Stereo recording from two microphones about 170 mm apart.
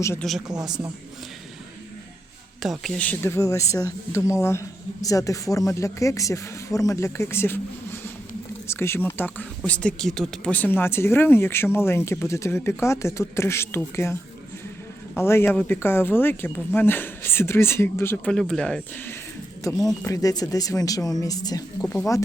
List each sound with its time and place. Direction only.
0.0 s speech: 15° left (ahead or behind)
0.4 s speech: 25° right (ahead or behind)
2.6 s speech: centre (ahead or behind)
8.6 s speech: 15° left (ahead or behind)
18.3 s speech: 5° left (ahead or behind)
19.8 s speech: 20° left (ahead or behind)